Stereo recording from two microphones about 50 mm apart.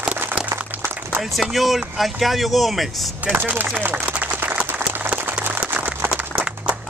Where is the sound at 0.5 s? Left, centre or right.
Right.